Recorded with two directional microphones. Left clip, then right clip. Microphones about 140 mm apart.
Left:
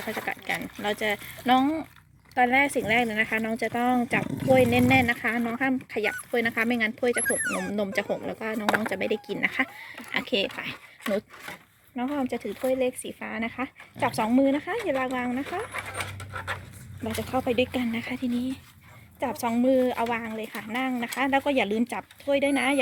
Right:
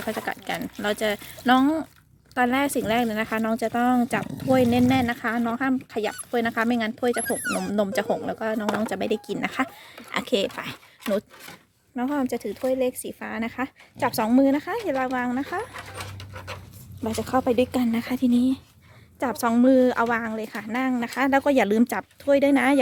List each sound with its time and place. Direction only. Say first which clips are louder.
0.0 s speech: right 2 dB; 35° right (ahead or behind)
17.2 s speech: right 4 dB; 40° right (ahead or behind); by 20.1 s 55° right (ahead or behind)
20.1 s speech: right 4 dB; 40° right (ahead or behind)
21.4 s speech: right 5 dB; 55° right (ahead or behind)